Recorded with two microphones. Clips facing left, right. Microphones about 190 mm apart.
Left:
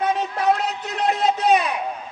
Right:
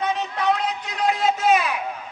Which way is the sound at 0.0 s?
45° left (ahead or behind).